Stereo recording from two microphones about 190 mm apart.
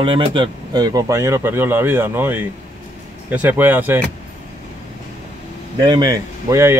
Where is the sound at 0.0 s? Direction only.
25° right (ahead or behind); by 4.0 s 10° right (ahead or behind).